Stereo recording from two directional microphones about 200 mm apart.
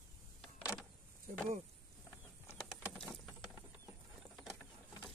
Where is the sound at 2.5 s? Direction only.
Centre (ahead or behind).